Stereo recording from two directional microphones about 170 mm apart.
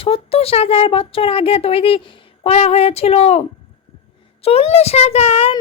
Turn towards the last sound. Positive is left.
turn(degrees=35)  # may be behind; listen again after turning